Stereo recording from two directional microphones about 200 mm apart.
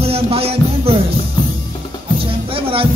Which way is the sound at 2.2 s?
25° right (ahead or behind).